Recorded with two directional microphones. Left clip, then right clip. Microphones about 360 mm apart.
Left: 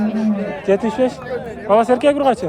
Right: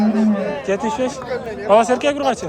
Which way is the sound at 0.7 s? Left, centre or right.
Centre.